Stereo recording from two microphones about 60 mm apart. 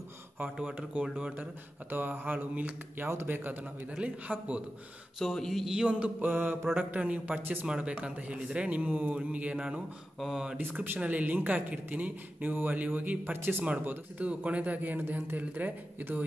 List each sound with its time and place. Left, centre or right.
0.6 s speech: centre
1.4 s speech: right
4.0 s speech: right
5.2 s a sound: centre
5.7 s speech: centre
6.3 s speech: right
6.8 s speech: right
7.6 s speech: centre
10.6 s speech: right
13.8 s speech: right